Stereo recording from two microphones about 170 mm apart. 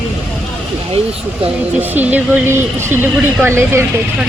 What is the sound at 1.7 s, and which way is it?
Speech, 10° right (ahead or behind).